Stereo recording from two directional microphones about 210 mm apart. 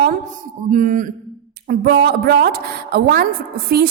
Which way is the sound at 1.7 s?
50° right (ahead or behind).